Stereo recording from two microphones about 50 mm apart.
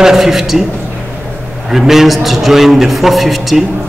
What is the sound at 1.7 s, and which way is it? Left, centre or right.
A man's voice, centre.